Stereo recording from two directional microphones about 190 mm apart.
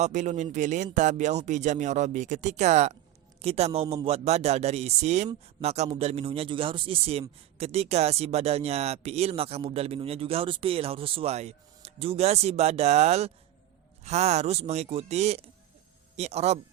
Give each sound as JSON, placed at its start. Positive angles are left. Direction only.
{"t": 0.0, "sound": "speech", "side_deg": -40}